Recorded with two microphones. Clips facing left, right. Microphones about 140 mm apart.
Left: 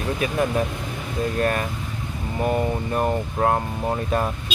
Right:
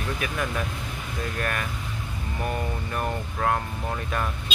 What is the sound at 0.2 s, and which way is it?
Speech, 30° left (ahead or behind).